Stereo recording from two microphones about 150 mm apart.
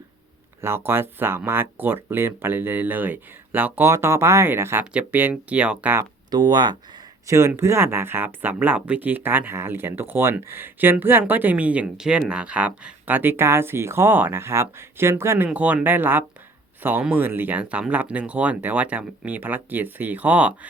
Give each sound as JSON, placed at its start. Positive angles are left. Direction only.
{"t": 0.6, "sound": "speech", "side_deg": -15}
{"t": 6.3, "sound": "speech", "side_deg": -30}
{"t": 7.3, "sound": "speech", "side_deg": -20}